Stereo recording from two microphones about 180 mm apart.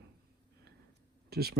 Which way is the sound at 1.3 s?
60° right (ahead or behind).